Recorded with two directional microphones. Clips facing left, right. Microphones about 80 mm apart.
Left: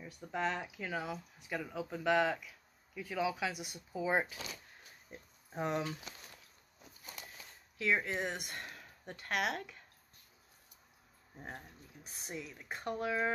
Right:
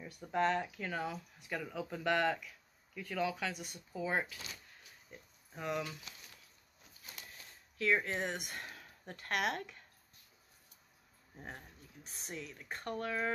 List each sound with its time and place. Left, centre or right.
0.0 s speech: centre
5.1 s speech: left
7.7 s speech: centre
11.3 s speech: centre